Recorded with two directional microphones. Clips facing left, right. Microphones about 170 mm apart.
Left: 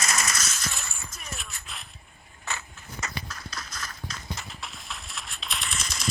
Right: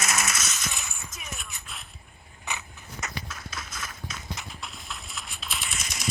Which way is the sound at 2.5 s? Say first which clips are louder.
Even; 15° right (ahead or behind).